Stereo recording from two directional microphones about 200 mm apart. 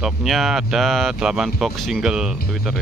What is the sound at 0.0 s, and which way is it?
Speech, centre (ahead or behind).